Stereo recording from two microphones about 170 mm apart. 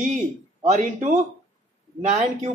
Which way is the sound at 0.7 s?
45° right (ahead or behind).